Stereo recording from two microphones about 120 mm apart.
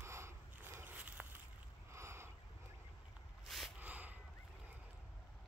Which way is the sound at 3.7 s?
15° right (ahead or behind).